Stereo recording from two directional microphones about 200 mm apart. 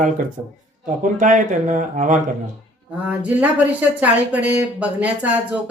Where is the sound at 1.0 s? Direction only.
40° right (ahead or behind).